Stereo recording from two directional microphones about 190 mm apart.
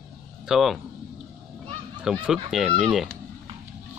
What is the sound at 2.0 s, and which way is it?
Speech, 5° right (ahead or behind).